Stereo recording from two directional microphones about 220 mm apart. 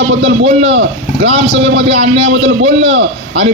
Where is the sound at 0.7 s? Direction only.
50° right (ahead or behind).